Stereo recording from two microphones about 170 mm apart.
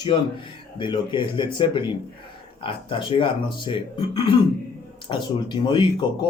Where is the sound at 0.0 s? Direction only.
30° left (ahead or behind).